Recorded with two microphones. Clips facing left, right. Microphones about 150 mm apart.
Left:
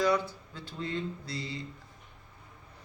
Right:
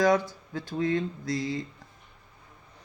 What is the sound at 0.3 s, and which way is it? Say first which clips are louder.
Speech: right 8 dB; 90° right.